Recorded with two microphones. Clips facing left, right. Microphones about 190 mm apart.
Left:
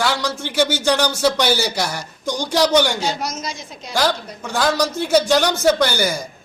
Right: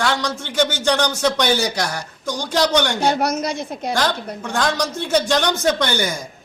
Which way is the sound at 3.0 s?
60° right (ahead or behind).